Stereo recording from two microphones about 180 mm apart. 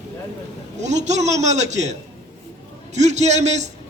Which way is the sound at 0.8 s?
40° right (ahead or behind).